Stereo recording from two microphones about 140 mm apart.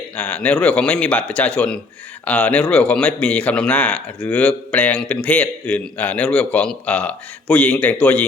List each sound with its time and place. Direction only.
0.2 s a man's voice: 10° left (ahead or behind)